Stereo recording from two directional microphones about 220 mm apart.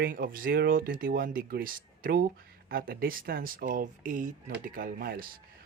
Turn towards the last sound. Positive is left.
turn(degrees=-40)  # may be behind; listen again after turning